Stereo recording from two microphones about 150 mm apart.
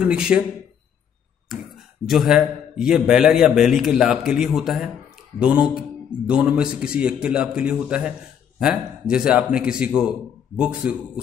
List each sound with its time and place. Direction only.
0.0 s speech: 5° right (ahead or behind)
1.5 s speech: centre (ahead or behind)